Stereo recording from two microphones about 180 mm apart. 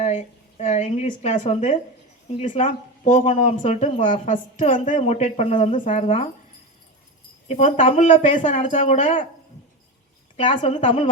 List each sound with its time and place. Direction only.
0.0 s a woman's voice: 40° left (ahead or behind)
7.4 s speech: 40° left (ahead or behind)
10.3 s a woman's voice: 30° left (ahead or behind)
10.6 s a woman's voice: 40° left (ahead or behind)